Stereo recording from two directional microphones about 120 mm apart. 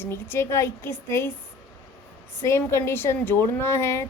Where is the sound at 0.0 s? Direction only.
20° left (ahead or behind).